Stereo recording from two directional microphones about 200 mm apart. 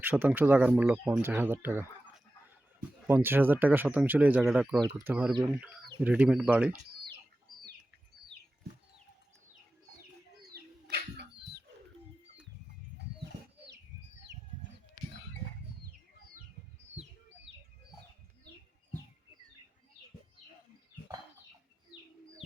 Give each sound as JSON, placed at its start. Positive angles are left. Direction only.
{"t": 0.0, "sound": "speech", "side_deg": -10}
{"t": 3.1, "sound": "speech", "side_deg": -10}
{"t": 10.5, "sound": "bird flight", "side_deg": -55}
{"t": 21.9, "sound": "bird", "side_deg": 55}